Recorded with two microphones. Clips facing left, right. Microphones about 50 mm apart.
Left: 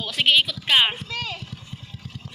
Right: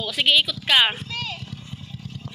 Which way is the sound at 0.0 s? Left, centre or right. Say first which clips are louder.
Even; left.